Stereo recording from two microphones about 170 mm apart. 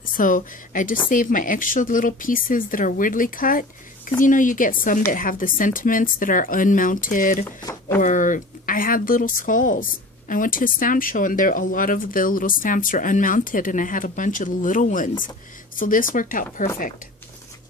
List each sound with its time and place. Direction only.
0.2 s speech: 50° left (ahead or behind)
7.4 s speech: 15° left (ahead or behind)
8.0 s speech: 50° left (ahead or behind)